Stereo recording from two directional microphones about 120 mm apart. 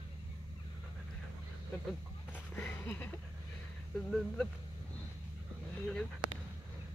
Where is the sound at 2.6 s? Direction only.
20° left (ahead or behind).